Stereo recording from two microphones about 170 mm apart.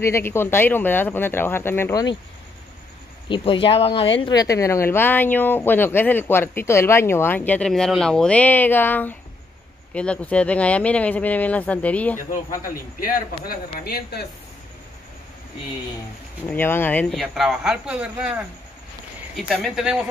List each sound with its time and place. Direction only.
0.0 s speech: 15° left (ahead or behind)
3.3 s speech: 30° left (ahead or behind)
4.2 s speech: 20° left (ahead or behind)
12.2 s a man's voice: 50° left (ahead or behind)
13.7 s speech: 65° left (ahead or behind)
16.4 s speech: 10° left (ahead or behind); by 20.1 s 5° right (ahead or behind)